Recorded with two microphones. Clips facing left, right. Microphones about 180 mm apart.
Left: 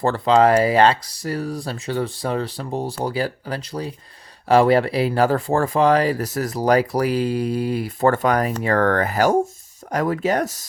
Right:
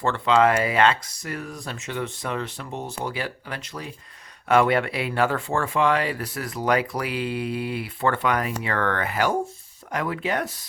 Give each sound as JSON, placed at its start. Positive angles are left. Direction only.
{"t": 0.0, "sound": "speech", "side_deg": 35}